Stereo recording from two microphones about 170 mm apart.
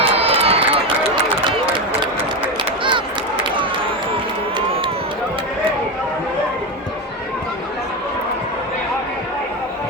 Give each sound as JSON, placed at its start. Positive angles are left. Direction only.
{"t": 0.0, "sound": "run", "side_deg": -35}
{"t": 4.5, "sound": "run", "side_deg": -30}